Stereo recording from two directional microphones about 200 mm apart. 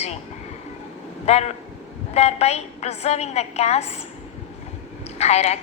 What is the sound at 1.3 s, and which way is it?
A woman's voice, 35° left (ahead or behind).